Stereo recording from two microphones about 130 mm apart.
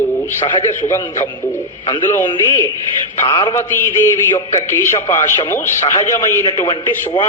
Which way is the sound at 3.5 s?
20° left (ahead or behind).